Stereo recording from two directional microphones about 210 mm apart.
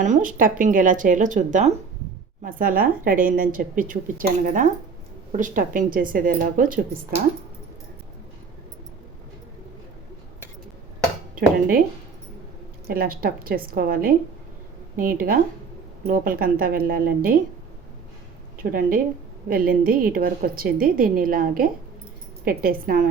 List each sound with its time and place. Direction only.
0.0 s a woman's voice: 40° right (ahead or behind)
12.9 s a woman's voice: 45° right (ahead or behind)
18.6 s a woman's voice: 40° right (ahead or behind)